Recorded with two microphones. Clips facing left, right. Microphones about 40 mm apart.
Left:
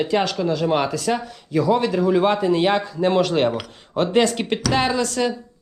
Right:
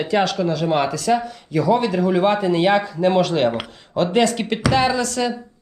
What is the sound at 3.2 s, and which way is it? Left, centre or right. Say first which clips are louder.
A man's voice: right 1 dB; right.